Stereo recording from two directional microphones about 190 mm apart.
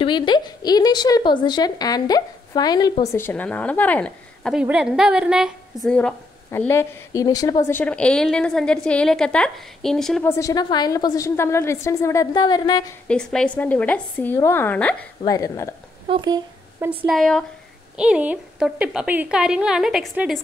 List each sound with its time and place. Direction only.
0.0 s a woman's voice: 25° left (ahead or behind); by 10.2 s centre (ahead or behind)
10.2 s a woman's voice: 15° left (ahead or behind)
13.1 s a woman's voice: 5° left (ahead or behind)
15.2 s a woman's voice: 20° left (ahead or behind)
16.1 s speech: 20° right (ahead or behind)
17.0 s a woman's voice: centre (ahead or behind)